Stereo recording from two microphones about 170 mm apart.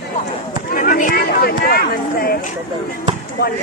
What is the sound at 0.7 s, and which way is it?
Chatter, 55° left (ahead or behind).